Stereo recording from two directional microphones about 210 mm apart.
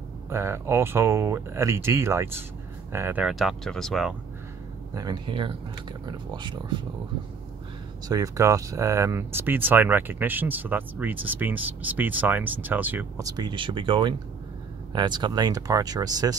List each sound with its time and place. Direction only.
0.3 s speech: 10° right (ahead or behind)
4.9 s speech: 20° right (ahead or behind)
8.1 s speech: 15° right (ahead or behind)